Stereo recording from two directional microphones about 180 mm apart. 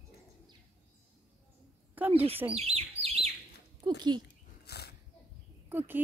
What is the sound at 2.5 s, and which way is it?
Chirp, 35° right (ahead or behind).